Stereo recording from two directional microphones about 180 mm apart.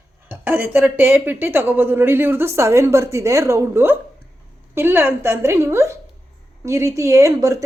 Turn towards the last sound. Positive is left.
turn(degrees=-15)  # may be behind; listen again after turning